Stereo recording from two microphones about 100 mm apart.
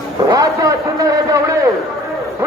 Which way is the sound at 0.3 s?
35° right (ahead or behind).